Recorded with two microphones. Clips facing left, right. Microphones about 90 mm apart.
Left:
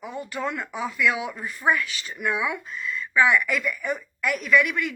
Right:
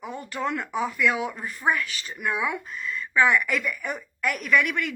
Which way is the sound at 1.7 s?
35° right (ahead or behind).